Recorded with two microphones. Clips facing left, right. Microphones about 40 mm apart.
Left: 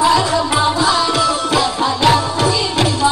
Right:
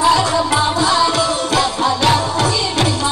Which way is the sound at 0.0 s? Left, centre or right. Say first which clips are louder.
Even; centre.